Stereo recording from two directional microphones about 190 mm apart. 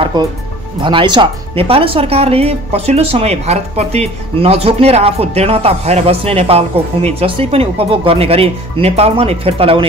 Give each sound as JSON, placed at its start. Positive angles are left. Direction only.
{"t": 0.0, "sound": "music", "side_deg": -20}
{"t": 0.7, "sound": "speech", "side_deg": -25}